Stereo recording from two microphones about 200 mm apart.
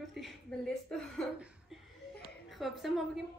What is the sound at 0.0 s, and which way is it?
A woman's voice, centre (ahead or behind).